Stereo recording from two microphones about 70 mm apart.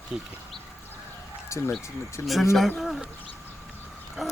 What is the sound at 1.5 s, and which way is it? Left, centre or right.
Speech, left.